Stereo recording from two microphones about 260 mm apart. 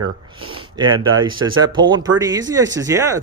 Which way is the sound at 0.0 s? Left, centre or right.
Centre.